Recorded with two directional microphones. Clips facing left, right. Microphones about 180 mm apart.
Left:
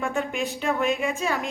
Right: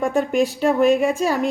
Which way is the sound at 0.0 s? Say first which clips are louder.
Right 8 dB; 35° right (ahead or behind).